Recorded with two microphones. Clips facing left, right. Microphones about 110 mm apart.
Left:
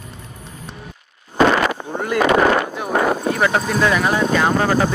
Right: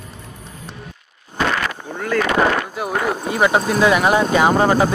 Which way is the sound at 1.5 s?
20° left (ahead or behind).